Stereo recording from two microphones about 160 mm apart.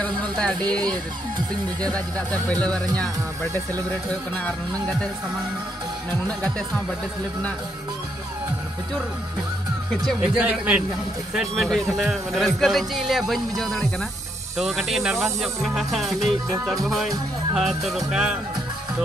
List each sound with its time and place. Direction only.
0.2 s speech: 5° left (ahead or behind)
0.6 s speech: 25° right (ahead or behind)
1.8 s speech: 10° left (ahead or behind)
4.5 s speech: 5° left (ahead or behind)
10.0 s speech: 5° right (ahead or behind)